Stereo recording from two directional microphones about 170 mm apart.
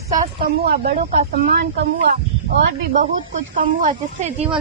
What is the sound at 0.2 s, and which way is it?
A woman's voice, 60° right (ahead or behind).